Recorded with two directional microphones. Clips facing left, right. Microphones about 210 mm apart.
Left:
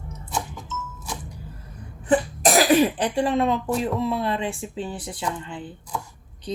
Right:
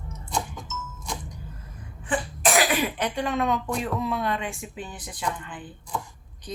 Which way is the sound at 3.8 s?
30° left (ahead or behind).